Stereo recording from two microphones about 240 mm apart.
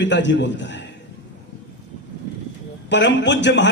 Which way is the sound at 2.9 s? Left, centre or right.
Left.